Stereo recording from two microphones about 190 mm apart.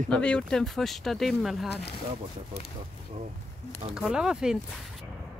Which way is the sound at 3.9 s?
5° right (ahead or behind).